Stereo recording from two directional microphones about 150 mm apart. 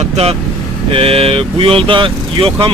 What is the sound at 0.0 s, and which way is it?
Speech, 40° right (ahead or behind).